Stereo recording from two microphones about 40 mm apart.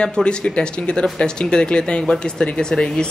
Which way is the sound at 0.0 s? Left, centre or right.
Left.